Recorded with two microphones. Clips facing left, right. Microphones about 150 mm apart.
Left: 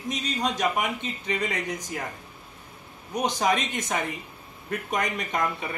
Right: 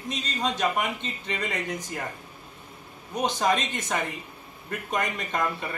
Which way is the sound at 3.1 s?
15° left (ahead or behind).